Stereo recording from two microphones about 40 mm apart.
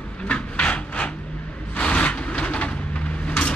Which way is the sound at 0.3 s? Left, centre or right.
Left.